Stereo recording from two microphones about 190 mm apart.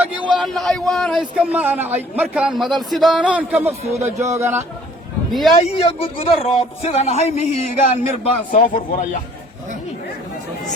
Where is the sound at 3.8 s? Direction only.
35° right (ahead or behind).